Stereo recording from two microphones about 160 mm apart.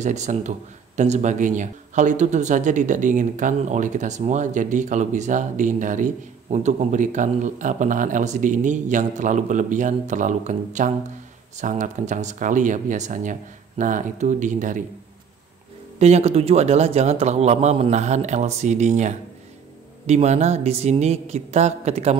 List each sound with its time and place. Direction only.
0.0 s speech: 45° right (ahead or behind)
16.0 s speech: 40° right (ahead or behind)